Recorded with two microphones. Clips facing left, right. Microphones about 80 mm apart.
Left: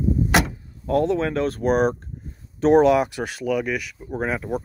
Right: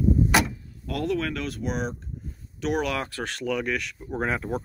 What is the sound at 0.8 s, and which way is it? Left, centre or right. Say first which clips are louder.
Speech: left 7 dB; left.